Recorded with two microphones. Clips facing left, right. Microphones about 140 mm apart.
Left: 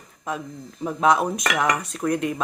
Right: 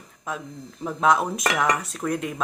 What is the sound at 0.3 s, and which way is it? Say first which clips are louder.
Speech: left 2 dB; centre (ahead or behind).